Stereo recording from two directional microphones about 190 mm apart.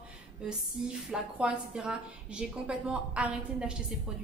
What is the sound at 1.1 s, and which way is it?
A woman's voice, 5° right (ahead or behind).